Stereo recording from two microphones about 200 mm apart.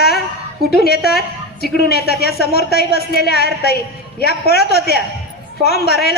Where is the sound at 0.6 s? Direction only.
50° right (ahead or behind).